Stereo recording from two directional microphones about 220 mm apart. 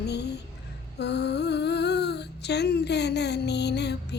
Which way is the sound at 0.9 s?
50° left (ahead or behind).